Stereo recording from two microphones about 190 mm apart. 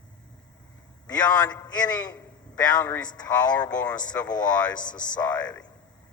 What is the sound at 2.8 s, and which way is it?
Speech, 5° left (ahead or behind).